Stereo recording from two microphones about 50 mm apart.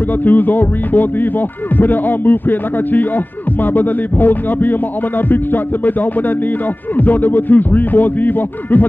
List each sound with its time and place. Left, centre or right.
0.2 s speech: left
7.0 s speech: left